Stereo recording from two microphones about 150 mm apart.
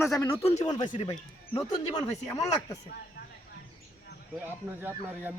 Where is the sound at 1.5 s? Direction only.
30° left (ahead or behind).